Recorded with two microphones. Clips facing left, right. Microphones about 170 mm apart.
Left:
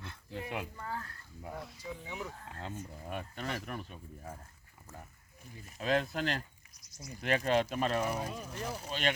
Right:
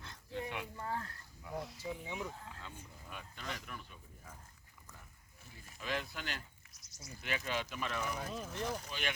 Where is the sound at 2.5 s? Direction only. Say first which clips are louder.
Left 9 dB; 55° left (ahead or behind).